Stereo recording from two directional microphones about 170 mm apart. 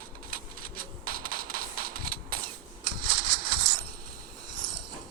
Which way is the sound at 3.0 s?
55° right (ahead or behind).